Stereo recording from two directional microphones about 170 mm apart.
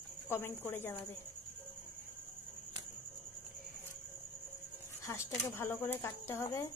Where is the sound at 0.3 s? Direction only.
15° left (ahead or behind).